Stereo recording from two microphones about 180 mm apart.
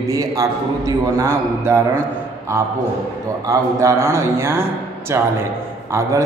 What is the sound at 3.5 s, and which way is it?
A man's voice, 15° right (ahead or behind).